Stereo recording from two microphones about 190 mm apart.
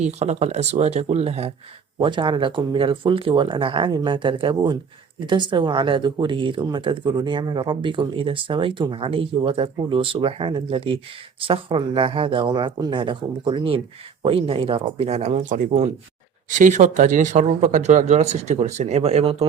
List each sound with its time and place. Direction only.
0.0 s speech: 35° right (ahead or behind)